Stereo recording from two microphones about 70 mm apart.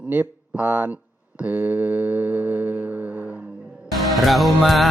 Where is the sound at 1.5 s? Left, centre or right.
Right.